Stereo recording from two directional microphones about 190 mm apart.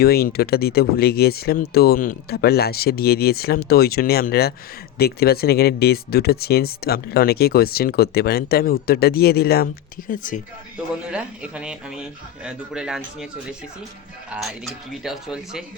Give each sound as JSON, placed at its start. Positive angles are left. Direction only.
{"t": 0.0, "sound": "speech", "side_deg": 55}
{"t": 10.1, "sound": "speech", "side_deg": 45}
{"t": 11.1, "sound": "speech", "side_deg": -5}